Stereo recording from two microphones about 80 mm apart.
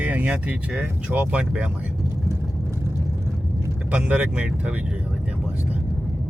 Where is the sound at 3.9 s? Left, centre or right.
Centre.